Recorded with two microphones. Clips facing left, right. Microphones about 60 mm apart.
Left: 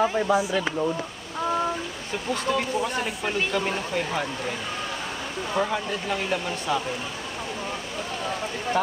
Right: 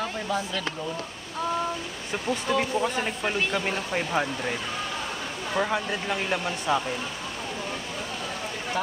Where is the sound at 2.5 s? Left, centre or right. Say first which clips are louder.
Even; centre.